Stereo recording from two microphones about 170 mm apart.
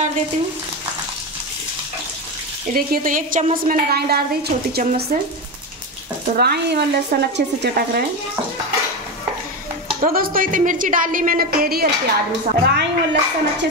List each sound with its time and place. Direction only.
2.9 s a woman's voice: 55° right (ahead or behind)
6.3 s speech: 70° right (ahead or behind)
10.0 s a woman's voice: 60° right (ahead or behind); by 13.7 s 85° right